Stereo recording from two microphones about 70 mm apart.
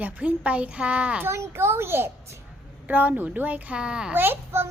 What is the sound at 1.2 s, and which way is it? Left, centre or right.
Speech, right.